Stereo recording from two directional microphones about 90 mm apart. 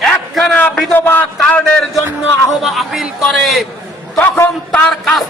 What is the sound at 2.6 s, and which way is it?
A man's voice, centre (ahead or behind).